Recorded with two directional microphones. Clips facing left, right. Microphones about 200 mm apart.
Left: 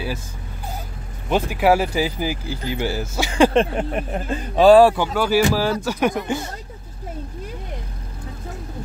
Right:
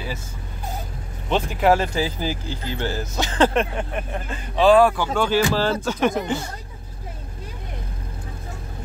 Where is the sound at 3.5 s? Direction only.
35° left (ahead or behind).